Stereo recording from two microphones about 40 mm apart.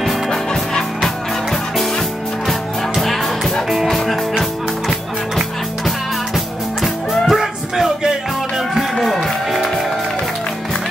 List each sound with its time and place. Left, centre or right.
0.3 s music: centre
1.0 s music: centre
8.9 s music: centre